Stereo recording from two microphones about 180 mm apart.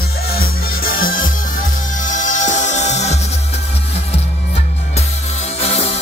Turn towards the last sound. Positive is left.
turn(degrees=35)  # may be behind; listen again after turning